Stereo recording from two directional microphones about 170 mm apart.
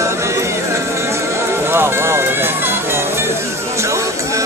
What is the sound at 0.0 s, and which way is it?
Music, 15° right (ahead or behind).